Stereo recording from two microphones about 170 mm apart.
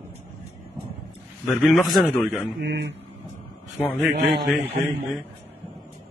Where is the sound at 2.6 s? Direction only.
90° right.